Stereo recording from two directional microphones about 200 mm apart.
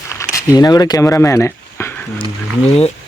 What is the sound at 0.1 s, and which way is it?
Speech, 15° left (ahead or behind).